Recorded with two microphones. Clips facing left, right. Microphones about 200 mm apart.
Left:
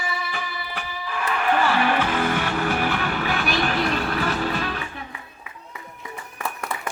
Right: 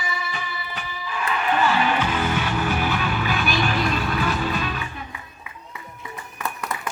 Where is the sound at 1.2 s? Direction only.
55° left (ahead or behind).